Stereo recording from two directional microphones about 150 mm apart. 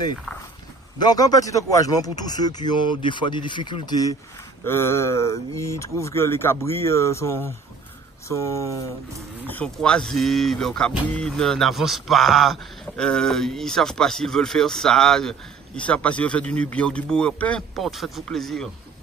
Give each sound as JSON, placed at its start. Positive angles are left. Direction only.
{"t": 0.9, "sound": "speech", "side_deg": 25}
{"t": 4.6, "sound": "speech", "side_deg": 15}
{"t": 9.5, "sound": "speech", "side_deg": 10}